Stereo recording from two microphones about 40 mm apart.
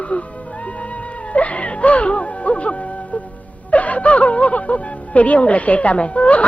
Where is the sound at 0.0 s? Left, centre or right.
Left.